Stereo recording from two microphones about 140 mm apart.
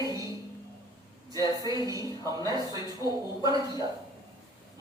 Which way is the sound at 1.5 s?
25° right (ahead or behind).